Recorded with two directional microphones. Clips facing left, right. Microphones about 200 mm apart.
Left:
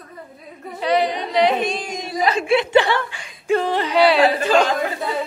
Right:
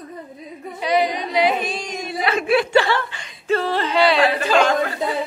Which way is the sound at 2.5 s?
20° left (ahead or behind).